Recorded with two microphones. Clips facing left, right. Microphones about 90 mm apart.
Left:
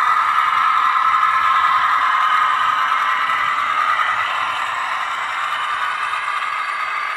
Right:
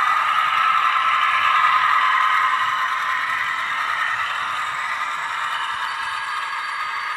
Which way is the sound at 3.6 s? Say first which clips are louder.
Left 6 dB; 90° left.